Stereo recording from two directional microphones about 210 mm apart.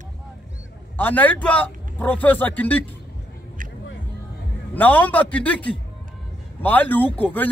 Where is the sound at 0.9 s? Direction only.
10° left (ahead or behind).